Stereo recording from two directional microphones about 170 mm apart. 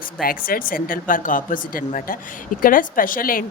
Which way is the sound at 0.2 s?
60° left (ahead or behind).